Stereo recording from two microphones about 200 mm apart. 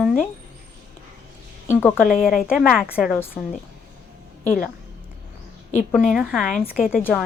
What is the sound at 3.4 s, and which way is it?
Speech, 15° left (ahead or behind).